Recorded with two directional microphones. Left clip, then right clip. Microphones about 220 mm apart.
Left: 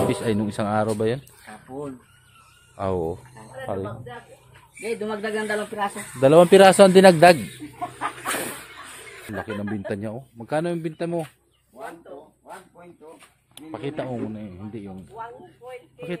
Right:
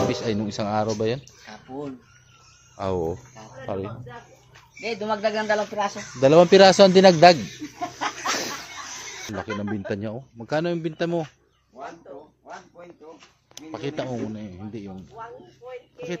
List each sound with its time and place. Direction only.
0.1 s speech: 15° left (ahead or behind)
1.5 s speech: centre (ahead or behind)
4.8 s speech: 15° right (ahead or behind)
6.1 s speech: 10° left (ahead or behind)
9.3 s speech: centre (ahead or behind)
13.7 s speech: centre (ahead or behind)
15.1 s speech: 45° left (ahead or behind)